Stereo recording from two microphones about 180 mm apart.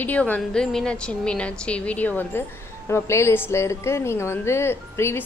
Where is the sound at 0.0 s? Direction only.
10° left (ahead or behind).